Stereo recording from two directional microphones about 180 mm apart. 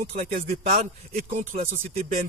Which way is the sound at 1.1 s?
45° right (ahead or behind).